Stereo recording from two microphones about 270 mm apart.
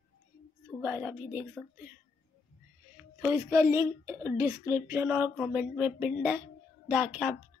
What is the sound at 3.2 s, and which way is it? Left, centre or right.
A woman's voice, centre.